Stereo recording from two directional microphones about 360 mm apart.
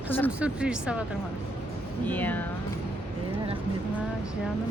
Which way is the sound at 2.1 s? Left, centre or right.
Centre.